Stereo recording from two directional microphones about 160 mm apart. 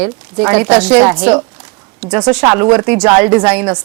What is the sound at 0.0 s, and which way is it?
Speech, 5° right (ahead or behind).